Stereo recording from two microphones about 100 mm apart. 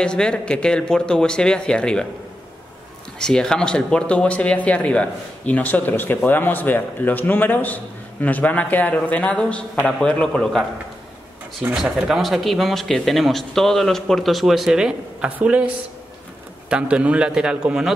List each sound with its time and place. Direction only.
0.0 s speech: 10° left (ahead or behind)
3.2 s speech: 5° left (ahead or behind)
11.7 s a man's voice: centre (ahead or behind)